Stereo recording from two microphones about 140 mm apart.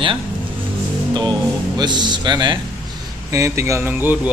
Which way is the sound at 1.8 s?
30° right (ahead or behind).